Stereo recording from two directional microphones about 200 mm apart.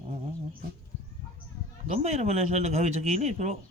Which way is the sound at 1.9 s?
35° right (ahead or behind).